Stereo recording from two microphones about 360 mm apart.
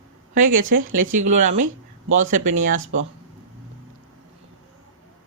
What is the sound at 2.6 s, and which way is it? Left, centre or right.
Speech, right.